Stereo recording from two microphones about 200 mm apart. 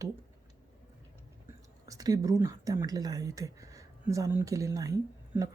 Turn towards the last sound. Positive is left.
turn(degrees=-15)  # may be behind; listen again after turning